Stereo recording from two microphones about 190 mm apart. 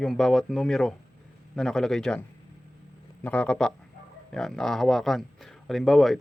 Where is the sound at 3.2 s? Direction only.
5° left (ahead or behind).